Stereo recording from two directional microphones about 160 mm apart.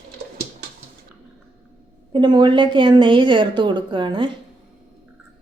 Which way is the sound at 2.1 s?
25° right (ahead or behind).